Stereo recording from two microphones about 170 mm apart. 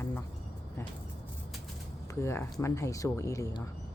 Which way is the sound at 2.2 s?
15° left (ahead or behind).